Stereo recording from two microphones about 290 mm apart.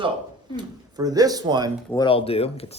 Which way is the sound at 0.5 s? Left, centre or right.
Centre.